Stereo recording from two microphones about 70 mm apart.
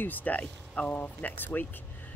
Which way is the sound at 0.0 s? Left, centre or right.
Left.